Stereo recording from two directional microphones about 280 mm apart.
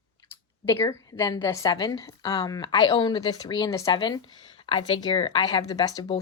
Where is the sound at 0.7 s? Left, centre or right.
Centre.